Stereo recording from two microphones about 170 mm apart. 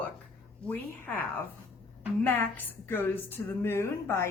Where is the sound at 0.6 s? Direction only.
10° left (ahead or behind).